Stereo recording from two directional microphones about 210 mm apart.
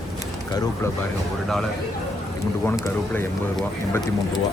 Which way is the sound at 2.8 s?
10° left (ahead or behind).